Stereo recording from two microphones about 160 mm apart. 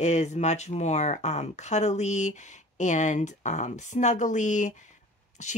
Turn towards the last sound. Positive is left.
turn(degrees=45)  # may be behind; listen again after turning